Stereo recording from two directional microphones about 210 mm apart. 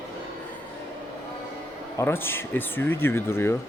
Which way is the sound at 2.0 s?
10° left (ahead or behind).